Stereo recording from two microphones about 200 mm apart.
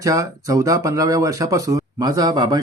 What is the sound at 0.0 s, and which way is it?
Speech, 15° right (ahead or behind).